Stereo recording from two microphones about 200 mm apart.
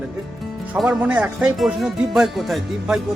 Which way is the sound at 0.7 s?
5° right (ahead or behind).